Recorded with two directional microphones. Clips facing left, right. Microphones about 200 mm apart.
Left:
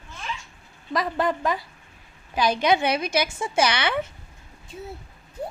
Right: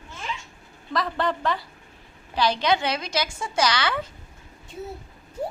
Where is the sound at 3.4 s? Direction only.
25° left (ahead or behind).